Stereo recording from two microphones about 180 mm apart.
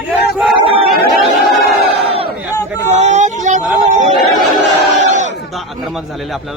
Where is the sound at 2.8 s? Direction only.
40° right (ahead or behind).